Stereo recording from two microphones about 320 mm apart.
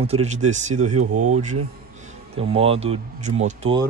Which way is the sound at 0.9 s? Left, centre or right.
Right.